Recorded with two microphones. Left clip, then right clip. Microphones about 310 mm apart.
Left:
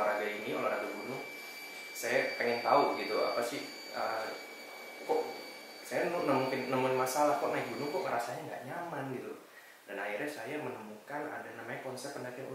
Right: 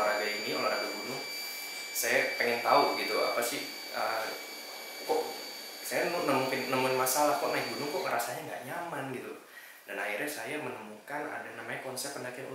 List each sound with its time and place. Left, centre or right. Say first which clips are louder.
0.0 s a sound: right 3 dB; centre
2.0 s speech: right 3 dB; centre
5.9 s speech: right 2 dB; centre